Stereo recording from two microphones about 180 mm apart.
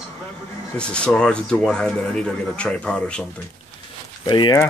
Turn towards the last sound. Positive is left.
turn(degrees=25)  # may be behind; listen again after turning